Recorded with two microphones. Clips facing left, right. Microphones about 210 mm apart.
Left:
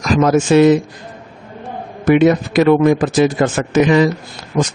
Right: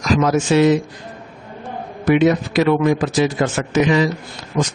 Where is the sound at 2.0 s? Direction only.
50° left (ahead or behind).